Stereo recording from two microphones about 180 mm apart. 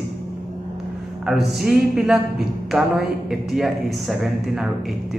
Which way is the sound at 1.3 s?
Centre (ahead or behind).